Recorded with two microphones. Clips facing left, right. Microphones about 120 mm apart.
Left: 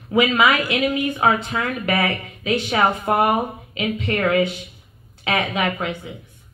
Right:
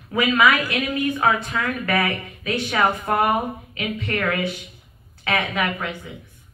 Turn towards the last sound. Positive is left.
turn(degrees=20)  # may be behind; listen again after turning